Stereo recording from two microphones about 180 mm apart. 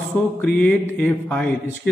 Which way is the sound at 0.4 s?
10° left (ahead or behind).